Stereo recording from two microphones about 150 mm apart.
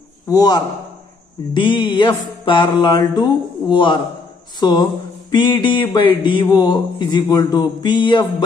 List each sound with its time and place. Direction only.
0.3 s a man's voice: 25° left (ahead or behind)
1.5 s mantra: 30° left (ahead or behind)
4.6 s a man's voice: 30° left (ahead or behind)